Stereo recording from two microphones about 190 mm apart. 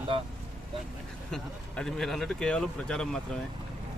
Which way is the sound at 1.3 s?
5° left (ahead or behind).